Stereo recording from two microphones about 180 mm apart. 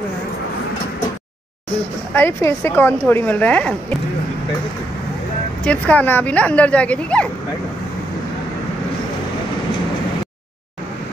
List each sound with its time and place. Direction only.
2.1 s speech: 10° left (ahead or behind)
5.6 s speech: 5° left (ahead or behind)